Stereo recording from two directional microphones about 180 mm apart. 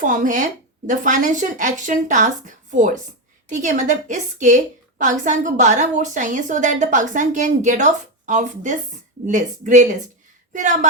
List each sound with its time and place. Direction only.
0.0 s a woman's voice: 45° right (ahead or behind)